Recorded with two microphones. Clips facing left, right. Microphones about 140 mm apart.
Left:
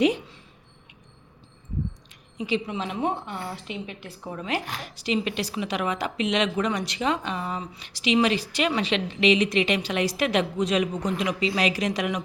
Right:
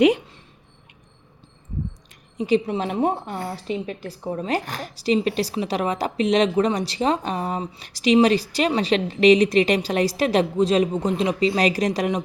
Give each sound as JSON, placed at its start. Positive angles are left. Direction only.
{"t": 0.0, "sound": "speech", "side_deg": -65}
{"t": 2.4, "sound": "a woman's voice", "side_deg": -40}